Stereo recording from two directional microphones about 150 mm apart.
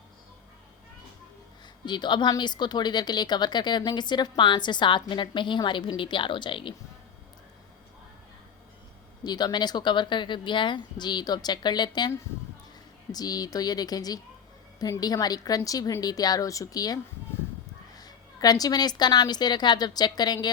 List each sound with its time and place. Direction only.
1.8 s speech: 30° left (ahead or behind)
9.2 s a woman's voice: 25° left (ahead or behind)